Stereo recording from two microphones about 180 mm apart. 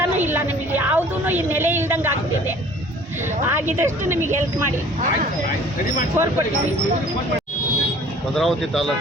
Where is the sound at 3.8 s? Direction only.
15° right (ahead or behind).